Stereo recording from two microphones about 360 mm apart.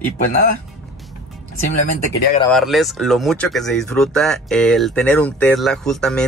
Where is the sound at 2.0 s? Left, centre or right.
Centre.